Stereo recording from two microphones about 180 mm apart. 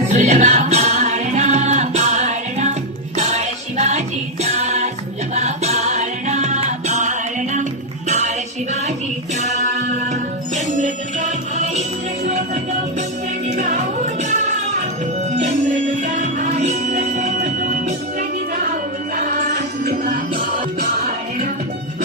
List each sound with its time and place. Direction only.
0.1 s music: 40° right (ahead or behind)
10.5 s music: 40° right (ahead or behind)
13.6 s music: 40° right (ahead or behind)